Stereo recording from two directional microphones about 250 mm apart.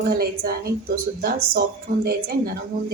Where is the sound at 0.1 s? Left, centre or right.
Right.